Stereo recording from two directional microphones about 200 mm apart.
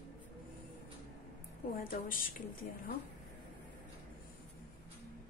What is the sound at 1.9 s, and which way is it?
Speech, 45° left (ahead or behind).